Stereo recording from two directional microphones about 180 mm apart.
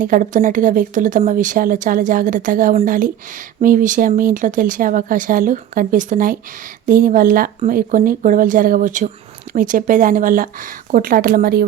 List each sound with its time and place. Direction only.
0.0 s speech: 45° right (ahead or behind)